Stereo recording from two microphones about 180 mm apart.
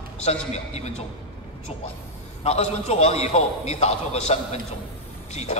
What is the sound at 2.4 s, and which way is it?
A man's voice, 35° left (ahead or behind).